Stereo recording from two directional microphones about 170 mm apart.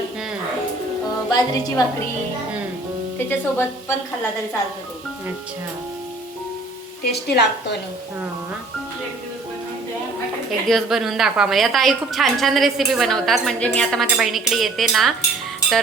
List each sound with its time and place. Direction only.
1.3 s a woman's voice: 20° left (ahead or behind)
3.2 s speech: 15° left (ahead or behind)
7.1 s a woman's voice: 80° left
10.7 s a woman's voice: centre (ahead or behind)